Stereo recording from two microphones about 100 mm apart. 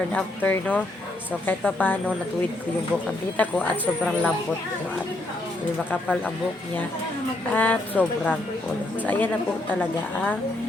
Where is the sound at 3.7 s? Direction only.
15° right (ahead or behind).